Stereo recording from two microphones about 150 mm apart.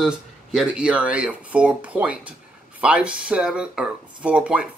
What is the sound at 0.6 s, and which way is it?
Speech, 5° right (ahead or behind).